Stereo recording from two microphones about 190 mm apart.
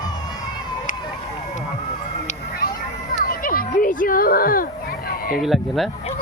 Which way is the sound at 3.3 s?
50° left (ahead or behind).